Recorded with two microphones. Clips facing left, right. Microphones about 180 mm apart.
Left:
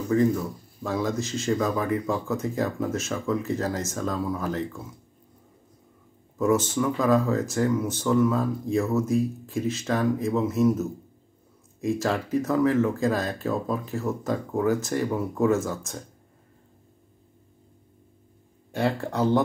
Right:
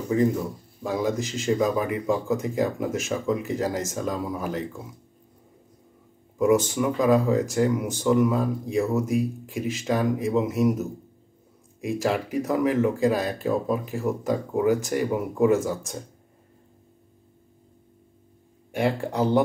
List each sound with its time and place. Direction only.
0.1 s speech: 15° right (ahead or behind)
6.3 s speech: 15° right (ahead or behind)
18.7 s speech: 15° right (ahead or behind)